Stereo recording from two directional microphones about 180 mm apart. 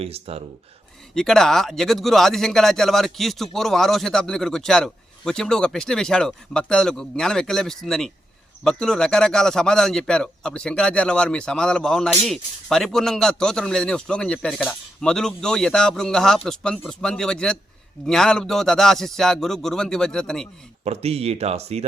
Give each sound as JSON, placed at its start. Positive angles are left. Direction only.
{"t": 0.0, "sound": "speech", "side_deg": -35}
{"t": 1.1, "sound": "a man's voice", "side_deg": 0}
{"t": 20.8, "sound": "speech", "side_deg": -35}